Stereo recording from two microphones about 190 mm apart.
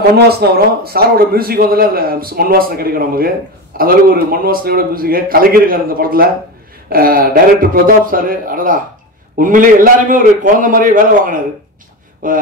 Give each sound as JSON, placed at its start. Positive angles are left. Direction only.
{"t": 0.1, "sound": "a man's voice", "side_deg": -55}